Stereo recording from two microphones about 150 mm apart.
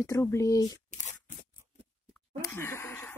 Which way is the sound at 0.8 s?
50° left (ahead or behind).